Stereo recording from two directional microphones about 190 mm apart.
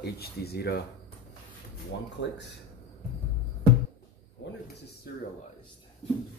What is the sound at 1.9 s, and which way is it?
Speech, 70° left (ahead or behind).